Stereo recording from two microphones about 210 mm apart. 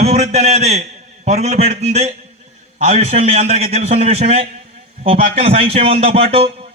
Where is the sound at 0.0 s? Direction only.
30° right (ahead or behind).